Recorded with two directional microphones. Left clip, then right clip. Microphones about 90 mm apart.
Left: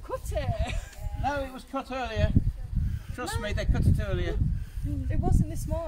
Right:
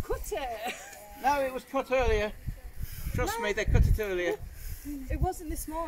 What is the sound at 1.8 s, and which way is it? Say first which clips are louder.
Speech: right 5 dB; 40° left (ahead or behind).